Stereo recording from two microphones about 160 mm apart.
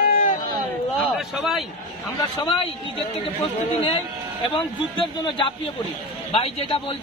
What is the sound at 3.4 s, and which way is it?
Speech, 35° left (ahead or behind).